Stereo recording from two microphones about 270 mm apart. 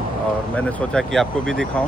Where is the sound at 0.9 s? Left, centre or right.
Centre.